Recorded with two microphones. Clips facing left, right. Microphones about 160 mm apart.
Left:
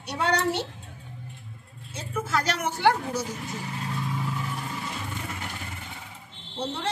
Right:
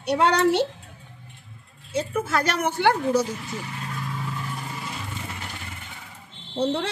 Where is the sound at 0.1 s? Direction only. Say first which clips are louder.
Right 6 dB; 80° right.